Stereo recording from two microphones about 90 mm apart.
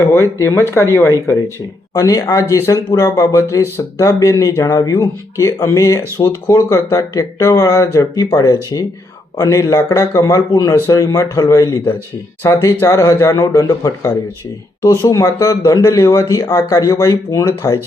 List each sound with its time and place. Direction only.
0.0 s speech: 30° left (ahead or behind)
1.9 s speech: 40° left (ahead or behind)
12.4 s speech: 30° left (ahead or behind)
15.1 s speech: 35° left (ahead or behind)